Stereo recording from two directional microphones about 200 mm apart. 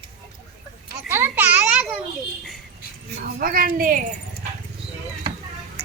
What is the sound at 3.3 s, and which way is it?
Speech, 45° right (ahead or behind).